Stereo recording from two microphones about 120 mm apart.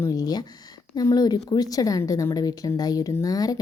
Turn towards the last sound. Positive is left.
turn(degrees=30)  # may be behind; listen again after turning